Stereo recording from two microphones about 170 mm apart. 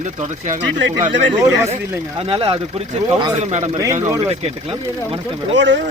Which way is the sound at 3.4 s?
45° right (ahead or behind).